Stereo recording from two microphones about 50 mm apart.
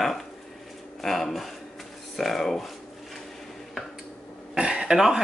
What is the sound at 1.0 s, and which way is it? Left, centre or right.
Speech, centre.